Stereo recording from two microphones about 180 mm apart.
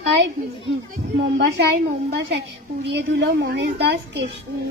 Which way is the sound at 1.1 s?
75° right (ahead or behind).